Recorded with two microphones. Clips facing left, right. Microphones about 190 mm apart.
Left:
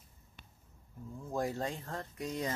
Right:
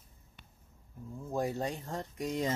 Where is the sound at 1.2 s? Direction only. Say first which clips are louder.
Right 2 dB; 10° right (ahead or behind).